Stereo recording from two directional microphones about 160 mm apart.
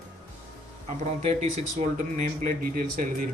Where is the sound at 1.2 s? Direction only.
40° right (ahead or behind); by 3.2 s 60° right (ahead or behind).